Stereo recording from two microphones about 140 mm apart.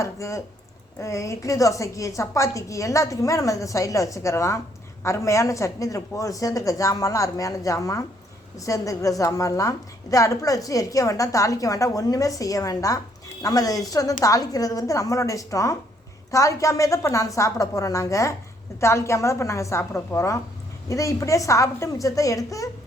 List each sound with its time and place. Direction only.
0.0 s a woman's voice: 20° left (ahead or behind)